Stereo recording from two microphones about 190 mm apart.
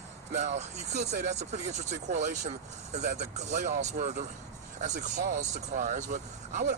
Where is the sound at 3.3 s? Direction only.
40° right (ahead or behind).